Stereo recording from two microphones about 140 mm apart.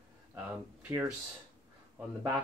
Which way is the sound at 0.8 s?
15° right (ahead or behind).